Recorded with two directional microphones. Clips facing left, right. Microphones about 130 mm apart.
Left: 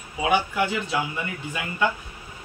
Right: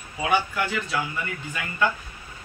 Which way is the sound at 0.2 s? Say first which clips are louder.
Left 2 dB; 15° left (ahead or behind).